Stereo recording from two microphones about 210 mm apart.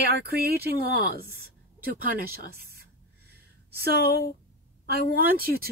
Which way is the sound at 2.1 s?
45° right (ahead or behind).